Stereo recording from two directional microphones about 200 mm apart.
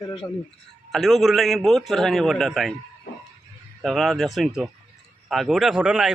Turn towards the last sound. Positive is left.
turn(degrees=-5)  # may be behind; listen again after turning